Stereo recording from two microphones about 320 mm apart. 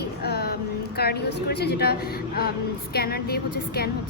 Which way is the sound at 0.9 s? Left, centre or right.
Left.